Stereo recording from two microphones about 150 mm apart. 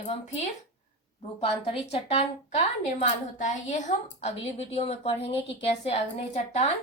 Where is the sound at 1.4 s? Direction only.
40° left (ahead or behind).